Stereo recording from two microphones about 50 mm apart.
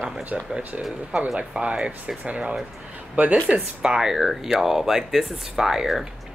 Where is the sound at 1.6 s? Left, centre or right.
Right.